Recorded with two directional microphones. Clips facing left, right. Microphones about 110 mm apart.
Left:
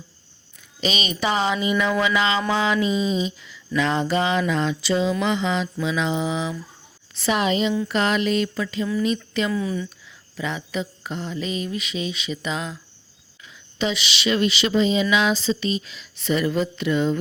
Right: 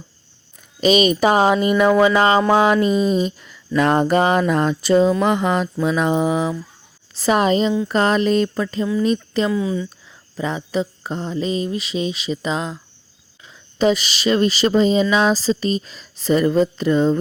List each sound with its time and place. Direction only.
0.8 s speech: 45° right (ahead or behind)
9.5 s speech: 20° right (ahead or behind)
10.3 s speech: 35° right (ahead or behind)